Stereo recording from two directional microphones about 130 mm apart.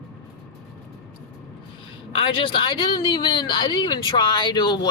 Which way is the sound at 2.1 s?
45° left (ahead or behind).